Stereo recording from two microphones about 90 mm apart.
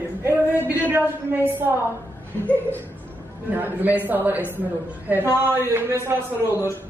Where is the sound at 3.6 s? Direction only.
20° right (ahead or behind).